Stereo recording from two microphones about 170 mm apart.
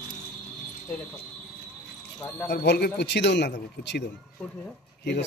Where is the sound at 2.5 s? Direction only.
75° left (ahead or behind); by 4.0 s 90° left.